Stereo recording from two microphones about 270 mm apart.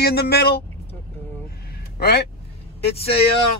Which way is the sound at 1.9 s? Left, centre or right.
Left.